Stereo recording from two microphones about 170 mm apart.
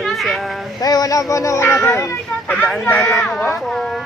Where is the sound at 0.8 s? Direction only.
20° left (ahead or behind).